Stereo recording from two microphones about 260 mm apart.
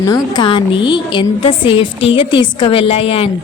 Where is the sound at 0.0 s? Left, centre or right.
Centre.